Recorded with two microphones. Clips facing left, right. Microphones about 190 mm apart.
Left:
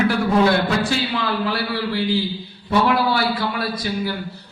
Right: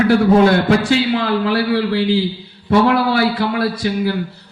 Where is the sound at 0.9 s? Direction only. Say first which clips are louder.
Right 7 dB; 60° right (ahead or behind).